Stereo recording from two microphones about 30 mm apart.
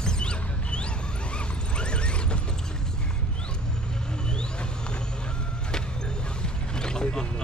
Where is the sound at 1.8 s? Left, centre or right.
Left.